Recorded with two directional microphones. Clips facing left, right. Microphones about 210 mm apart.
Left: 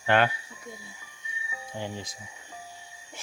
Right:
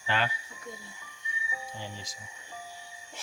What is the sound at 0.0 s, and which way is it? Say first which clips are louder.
Speech: left 8 dB; 60° left (ahead or behind).